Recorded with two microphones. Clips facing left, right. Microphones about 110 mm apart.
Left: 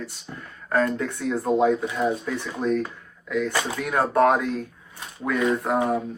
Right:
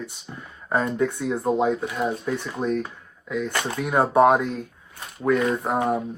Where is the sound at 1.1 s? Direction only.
Centre (ahead or behind).